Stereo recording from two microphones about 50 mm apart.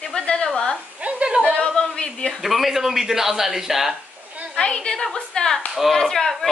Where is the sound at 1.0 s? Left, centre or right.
Right.